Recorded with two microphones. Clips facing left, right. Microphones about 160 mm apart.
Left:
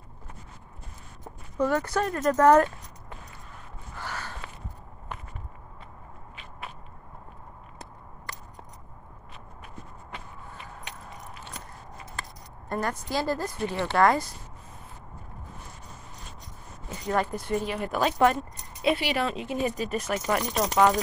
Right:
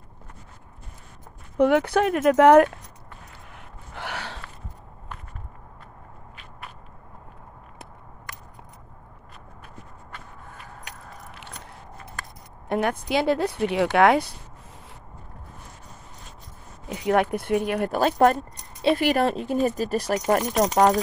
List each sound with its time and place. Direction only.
1.6 s speech: 65° right (ahead or behind)
3.5 s gasp: 75° right (ahead or behind)
12.6 s speech: 65° right (ahead or behind)
17.1 s speech: 65° right (ahead or behind)
17.9 s speech: 45° right (ahead or behind)